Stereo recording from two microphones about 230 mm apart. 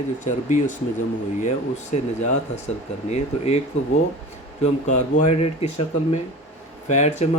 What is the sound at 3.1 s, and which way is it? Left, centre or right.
Speech, left.